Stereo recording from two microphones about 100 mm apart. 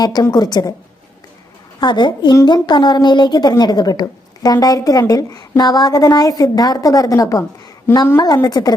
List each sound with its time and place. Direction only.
0.0 s a woman's voice: 40° left (ahead or behind)
1.8 s a woman's voice: 50° left (ahead or behind)
8.4 s a woman's voice: 40° left (ahead or behind)